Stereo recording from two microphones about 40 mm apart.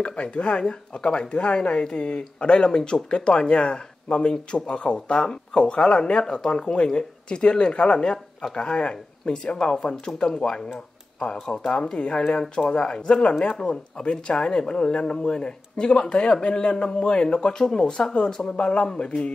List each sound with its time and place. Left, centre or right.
0.0 s speech: left